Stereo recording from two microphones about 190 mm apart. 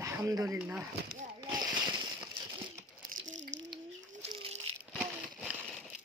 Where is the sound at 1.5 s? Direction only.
20° right (ahead or behind).